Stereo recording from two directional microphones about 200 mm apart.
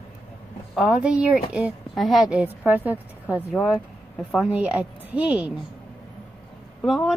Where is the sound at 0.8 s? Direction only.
5° right (ahead or behind).